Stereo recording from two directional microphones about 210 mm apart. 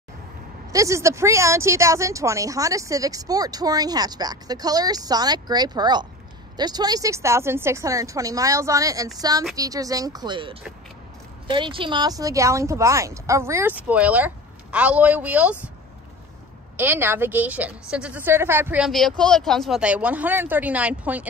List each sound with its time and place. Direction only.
0.7 s speech: 15° right (ahead or behind)
16.7 s speech: 10° right (ahead or behind)